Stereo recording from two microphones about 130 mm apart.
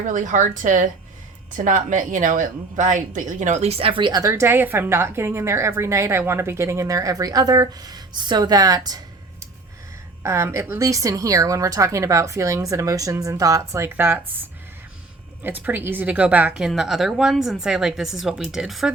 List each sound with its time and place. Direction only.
0.1 s a woman's voice: 75° right (ahead or behind); by 9.0 s 30° right (ahead or behind)
10.2 s speech: 20° right (ahead or behind)
15.4 s a woman's voice: 15° right (ahead or behind)